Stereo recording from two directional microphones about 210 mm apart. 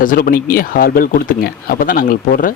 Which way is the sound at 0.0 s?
45° left (ahead or behind).